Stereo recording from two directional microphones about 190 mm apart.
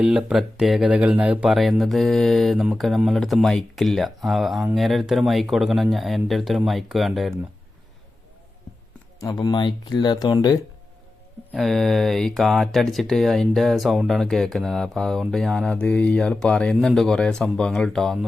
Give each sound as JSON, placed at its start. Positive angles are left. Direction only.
{"t": 0.0, "sound": "speech", "side_deg": -5}
{"t": 9.2, "sound": "speech", "side_deg": 20}
{"t": 11.5, "sound": "speech", "side_deg": 0}